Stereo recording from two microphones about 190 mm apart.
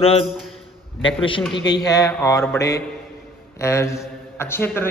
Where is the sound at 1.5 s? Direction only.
65° left (ahead or behind).